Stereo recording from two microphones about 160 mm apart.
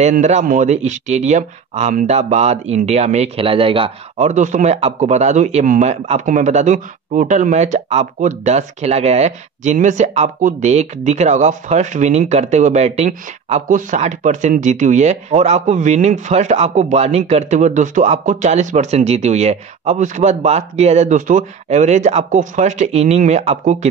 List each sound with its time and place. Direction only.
0.0 s a man's voice: 45° right (ahead or behind)
4.3 s a man's voice: 50° right (ahead or behind)